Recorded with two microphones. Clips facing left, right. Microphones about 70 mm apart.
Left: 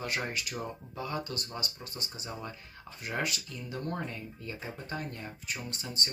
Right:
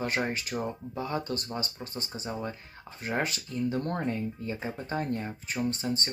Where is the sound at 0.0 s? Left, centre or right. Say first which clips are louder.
Right 5 dB; right.